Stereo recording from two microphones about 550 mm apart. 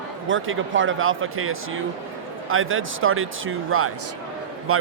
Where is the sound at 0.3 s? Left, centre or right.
Right.